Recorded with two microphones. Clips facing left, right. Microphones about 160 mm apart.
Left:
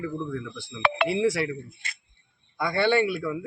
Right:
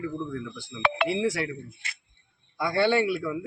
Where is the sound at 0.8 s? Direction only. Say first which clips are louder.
Left 1 dB; 60° left (ahead or behind).